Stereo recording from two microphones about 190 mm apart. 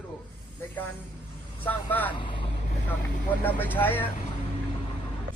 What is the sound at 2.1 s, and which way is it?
Speech, 25° left (ahead or behind).